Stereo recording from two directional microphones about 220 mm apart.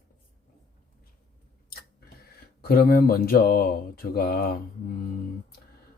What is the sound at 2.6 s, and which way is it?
Speech, 45° left (ahead or behind).